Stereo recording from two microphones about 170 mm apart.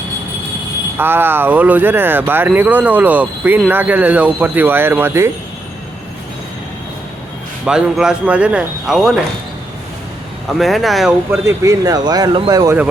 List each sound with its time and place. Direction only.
0.9 s speech: 10° right (ahead or behind)
7.6 s speech: 5° right (ahead or behind)
10.6 s speech: centre (ahead or behind)
11.3 s speech: 20° right (ahead or behind)